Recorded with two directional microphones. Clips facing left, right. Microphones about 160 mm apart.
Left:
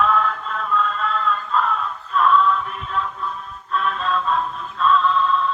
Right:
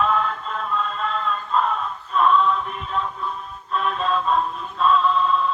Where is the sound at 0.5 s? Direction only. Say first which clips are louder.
Left 3 dB; 35° right (ahead or behind).